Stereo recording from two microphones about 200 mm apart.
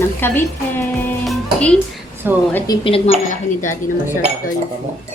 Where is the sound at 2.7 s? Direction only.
20° left (ahead or behind).